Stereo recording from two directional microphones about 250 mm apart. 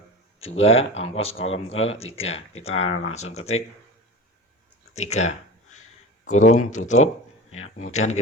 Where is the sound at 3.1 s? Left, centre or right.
Left.